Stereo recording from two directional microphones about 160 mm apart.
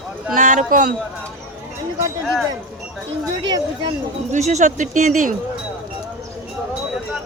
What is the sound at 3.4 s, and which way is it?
Speech, 25° right (ahead or behind).